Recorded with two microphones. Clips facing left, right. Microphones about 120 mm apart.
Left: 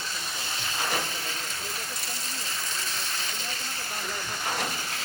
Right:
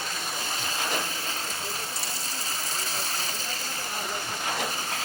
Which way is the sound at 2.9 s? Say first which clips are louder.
Right 2 dB; 35° right (ahead or behind).